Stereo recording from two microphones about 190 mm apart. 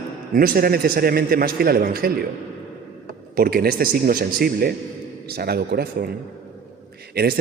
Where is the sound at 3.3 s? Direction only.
55° right (ahead or behind).